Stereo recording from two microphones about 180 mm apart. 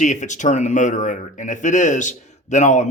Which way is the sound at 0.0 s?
40° left (ahead or behind).